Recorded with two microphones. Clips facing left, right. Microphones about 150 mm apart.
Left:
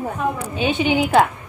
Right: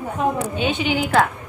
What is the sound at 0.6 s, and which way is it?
Speech, 5° left (ahead or behind).